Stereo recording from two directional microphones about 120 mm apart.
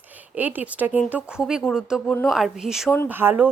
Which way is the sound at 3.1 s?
15° right (ahead or behind).